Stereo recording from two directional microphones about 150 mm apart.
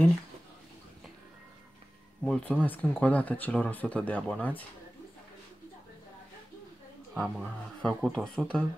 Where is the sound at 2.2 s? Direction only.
5° left (ahead or behind).